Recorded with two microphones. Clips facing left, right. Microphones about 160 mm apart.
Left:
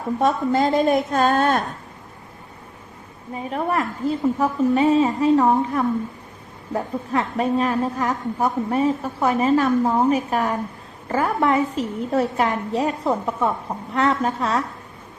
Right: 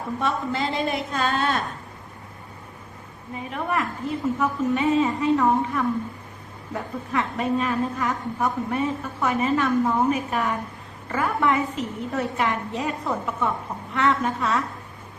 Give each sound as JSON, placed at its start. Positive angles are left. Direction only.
{"t": 0.2, "sound": "a woman's voice", "side_deg": 40}
{"t": 3.5, "sound": "a woman's voice", "side_deg": 35}